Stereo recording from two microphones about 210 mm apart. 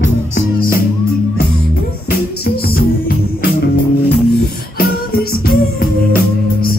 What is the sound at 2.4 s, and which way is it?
Music, 45° left (ahead or behind).